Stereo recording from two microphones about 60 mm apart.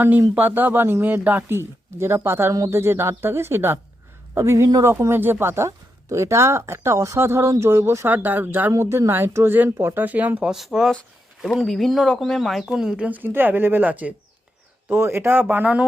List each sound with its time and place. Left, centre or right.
0.0 s speech: right
1.0 s speech: right
4.4 s speech: right
8.1 s speech: right
8.8 s speech: right
10.5 s speech: centre
13.1 s speech: right
14.8 s speech: right